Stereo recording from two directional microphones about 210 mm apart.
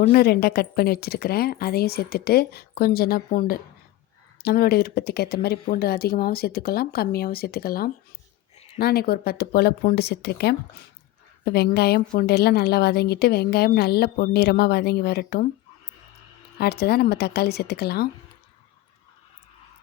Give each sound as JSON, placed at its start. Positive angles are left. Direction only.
{"t": 0.1, "sound": "a woman's voice", "side_deg": 45}
{"t": 16.6, "sound": "a woman's voice", "side_deg": 50}